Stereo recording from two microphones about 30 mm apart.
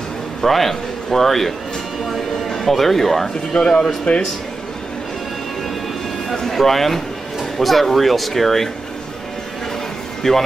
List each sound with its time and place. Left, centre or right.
0.4 s a man's voice: centre
2.7 s speech: centre
4.1 s a man's voice: left
6.5 s speech: centre
10.2 s speech: centre